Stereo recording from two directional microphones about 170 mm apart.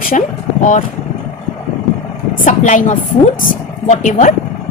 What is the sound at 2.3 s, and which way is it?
Speech, 45° left (ahead or behind).